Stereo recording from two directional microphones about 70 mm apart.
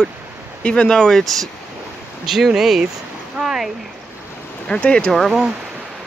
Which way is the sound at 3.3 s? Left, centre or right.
Centre.